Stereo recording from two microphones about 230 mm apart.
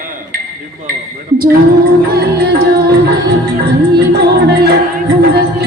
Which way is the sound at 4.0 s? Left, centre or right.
Right.